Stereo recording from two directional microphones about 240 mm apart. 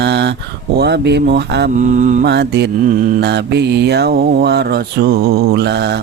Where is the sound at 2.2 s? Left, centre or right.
Right.